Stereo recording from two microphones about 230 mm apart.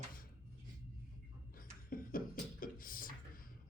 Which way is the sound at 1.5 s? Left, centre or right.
Left.